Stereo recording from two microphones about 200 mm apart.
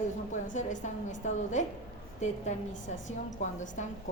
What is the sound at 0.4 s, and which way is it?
A woman's voice, 40° left (ahead or behind).